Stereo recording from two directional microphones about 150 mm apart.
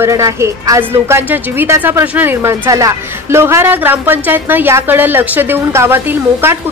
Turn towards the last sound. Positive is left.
turn(degrees=-15)  # may be behind; listen again after turning